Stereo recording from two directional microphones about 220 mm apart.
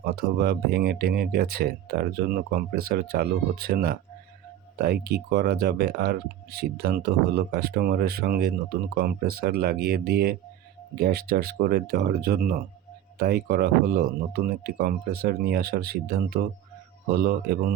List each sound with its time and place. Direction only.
0.0 s speech: 45° right (ahead or behind)